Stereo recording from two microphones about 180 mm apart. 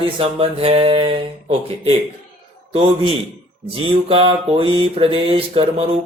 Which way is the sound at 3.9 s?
30° right (ahead or behind).